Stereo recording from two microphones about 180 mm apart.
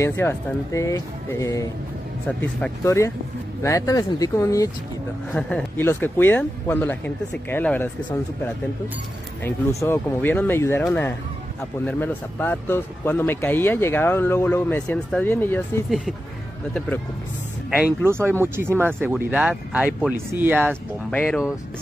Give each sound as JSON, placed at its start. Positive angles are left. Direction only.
{"t": 0.0, "sound": "speech", "side_deg": 15}
{"t": 5.3, "sound": "speech", "side_deg": 5}
{"t": 9.4, "sound": "speech", "side_deg": 15}
{"t": 17.6, "sound": "speech", "side_deg": -10}
{"t": 21.1, "sound": "speech", "side_deg": 10}